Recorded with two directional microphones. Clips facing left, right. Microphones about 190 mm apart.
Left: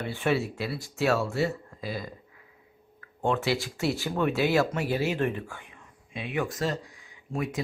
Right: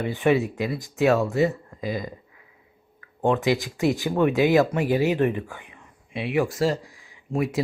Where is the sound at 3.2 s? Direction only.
15° right (ahead or behind).